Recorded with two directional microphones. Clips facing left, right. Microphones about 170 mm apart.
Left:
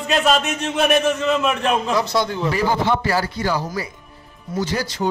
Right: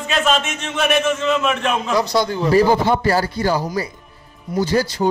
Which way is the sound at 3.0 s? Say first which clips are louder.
Right 3 dB; 40° right (ahead or behind).